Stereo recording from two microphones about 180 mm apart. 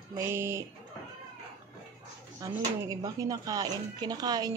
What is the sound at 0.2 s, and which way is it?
Speech, 15° right (ahead or behind).